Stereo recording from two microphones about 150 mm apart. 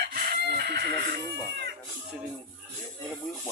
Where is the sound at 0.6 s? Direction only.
90° right.